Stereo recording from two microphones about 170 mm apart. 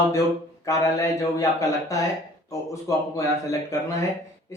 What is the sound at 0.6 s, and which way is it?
Speech, 20° left (ahead or behind).